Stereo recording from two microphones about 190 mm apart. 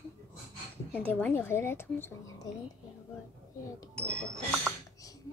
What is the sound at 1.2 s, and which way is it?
Speech, 10° left (ahead or behind).